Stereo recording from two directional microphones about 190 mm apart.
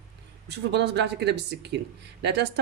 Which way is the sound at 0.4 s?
60° right (ahead or behind).